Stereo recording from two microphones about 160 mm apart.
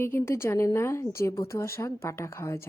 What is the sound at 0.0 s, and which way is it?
Speech, 15° left (ahead or behind).